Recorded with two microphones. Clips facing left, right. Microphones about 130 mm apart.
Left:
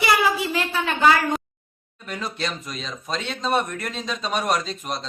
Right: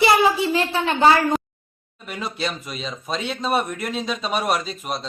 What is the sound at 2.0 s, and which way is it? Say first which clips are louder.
Speech: right 1 dB; 5° right (ahead or behind).